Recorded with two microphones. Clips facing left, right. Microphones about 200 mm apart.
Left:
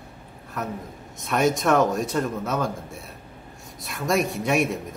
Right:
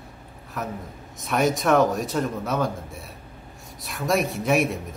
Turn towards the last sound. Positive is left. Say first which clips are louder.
# right 1 dB
turn(degrees=0)  # may be behind; listen again after turning